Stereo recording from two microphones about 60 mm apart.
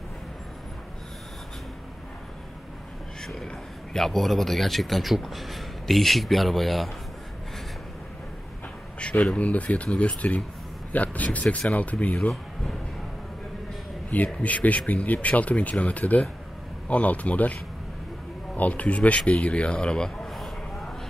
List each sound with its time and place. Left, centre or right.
3.4 s a man's voice: centre
9.0 s speech: centre
10.9 s a sound: left
11.7 s speech: left
14.1 s speech: left
18.6 s speech: left; by 20.9 s centre